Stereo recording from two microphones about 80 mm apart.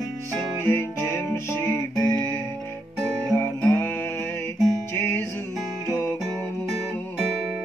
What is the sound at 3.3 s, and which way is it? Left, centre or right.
Music, left.